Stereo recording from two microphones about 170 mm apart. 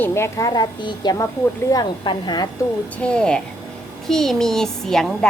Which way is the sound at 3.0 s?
5° left (ahead or behind).